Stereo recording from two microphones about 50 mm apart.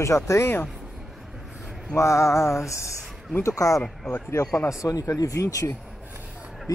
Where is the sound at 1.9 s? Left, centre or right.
Left.